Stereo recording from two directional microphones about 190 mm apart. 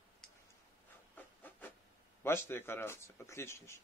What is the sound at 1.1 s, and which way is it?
Rub, 10° left (ahead or behind).